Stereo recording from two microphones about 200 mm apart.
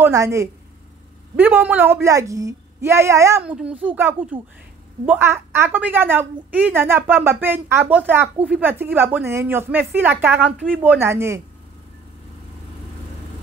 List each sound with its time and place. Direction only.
0.0 s a woman's voice: 15° right (ahead or behind)